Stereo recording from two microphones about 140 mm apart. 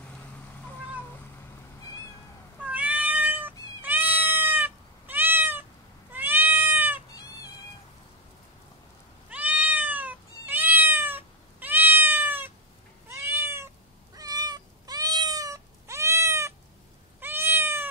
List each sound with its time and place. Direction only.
2.6 s cat: 10° right (ahead or behind)
9.3 s cat: 10° right (ahead or behind)
14.1 s cat: 25° right (ahead or behind)